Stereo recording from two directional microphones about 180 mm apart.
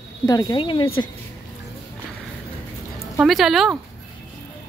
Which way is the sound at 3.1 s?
Centre (ahead or behind).